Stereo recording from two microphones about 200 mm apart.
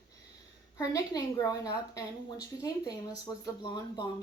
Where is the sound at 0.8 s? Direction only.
15° left (ahead or behind).